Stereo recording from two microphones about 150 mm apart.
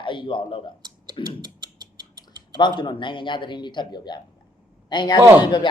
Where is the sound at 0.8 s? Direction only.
30° right (ahead or behind).